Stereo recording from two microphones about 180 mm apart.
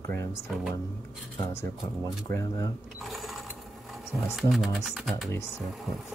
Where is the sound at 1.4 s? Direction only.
15° left (ahead or behind).